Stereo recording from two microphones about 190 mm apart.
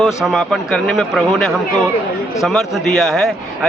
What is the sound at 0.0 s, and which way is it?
A man's voice, centre (ahead or behind).